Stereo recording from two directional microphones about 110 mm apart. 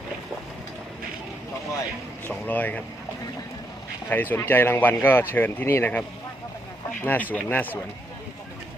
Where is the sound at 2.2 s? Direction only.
15° left (ahead or behind).